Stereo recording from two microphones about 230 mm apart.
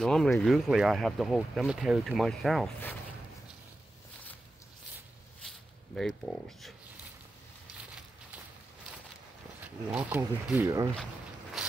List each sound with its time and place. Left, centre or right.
0.0 s speech: centre
5.9 s speech: centre
9.6 s speech: centre
11.6 s a sound: centre